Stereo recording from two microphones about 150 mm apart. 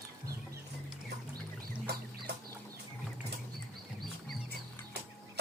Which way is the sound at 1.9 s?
90° right.